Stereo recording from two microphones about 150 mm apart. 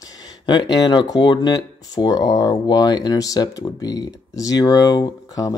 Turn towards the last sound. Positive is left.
turn(degrees=25)  # may be behind; listen again after turning